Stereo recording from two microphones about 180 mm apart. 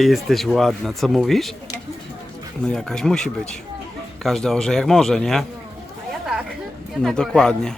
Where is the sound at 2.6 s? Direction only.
5° left (ahead or behind).